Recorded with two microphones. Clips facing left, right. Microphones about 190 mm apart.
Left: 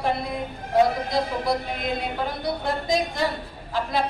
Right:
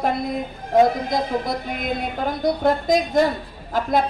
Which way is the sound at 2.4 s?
45° right (ahead or behind).